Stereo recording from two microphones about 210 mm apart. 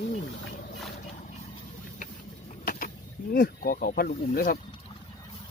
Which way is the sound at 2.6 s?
40° left (ahead or behind).